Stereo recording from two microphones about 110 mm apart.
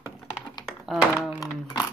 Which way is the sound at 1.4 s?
35° left (ahead or behind).